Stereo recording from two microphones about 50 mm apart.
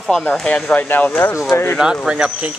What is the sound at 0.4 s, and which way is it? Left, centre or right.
Speech, centre.